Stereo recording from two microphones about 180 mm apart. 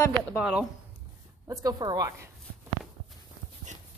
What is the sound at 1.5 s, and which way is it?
Speech, 20° right (ahead or behind).